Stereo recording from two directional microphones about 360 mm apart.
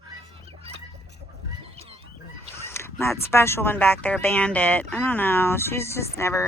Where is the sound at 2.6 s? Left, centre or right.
Centre.